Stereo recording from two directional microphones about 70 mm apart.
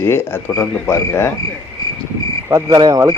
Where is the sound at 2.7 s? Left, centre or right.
Right.